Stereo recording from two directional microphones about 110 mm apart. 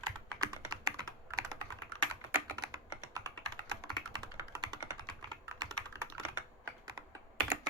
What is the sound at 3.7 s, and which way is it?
Computer keyboard, 40° right (ahead or behind).